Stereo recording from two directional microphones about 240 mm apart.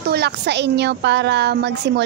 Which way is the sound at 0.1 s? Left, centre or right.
Right.